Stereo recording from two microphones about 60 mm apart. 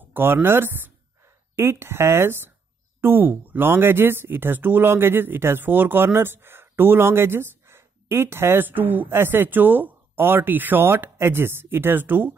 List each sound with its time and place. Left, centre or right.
0.1 s speech: right
1.6 s speech: right